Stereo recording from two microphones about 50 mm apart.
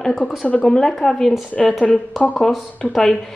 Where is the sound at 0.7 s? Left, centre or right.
Centre.